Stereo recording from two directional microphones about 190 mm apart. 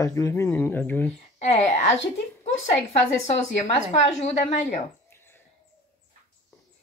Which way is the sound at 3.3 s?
35° left (ahead or behind).